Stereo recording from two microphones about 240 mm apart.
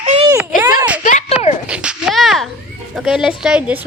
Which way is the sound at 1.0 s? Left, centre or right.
Left.